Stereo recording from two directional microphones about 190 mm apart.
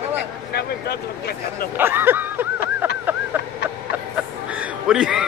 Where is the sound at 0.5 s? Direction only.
55° left (ahead or behind).